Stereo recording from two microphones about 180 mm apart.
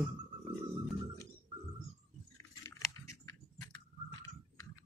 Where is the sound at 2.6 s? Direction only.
15° left (ahead or behind).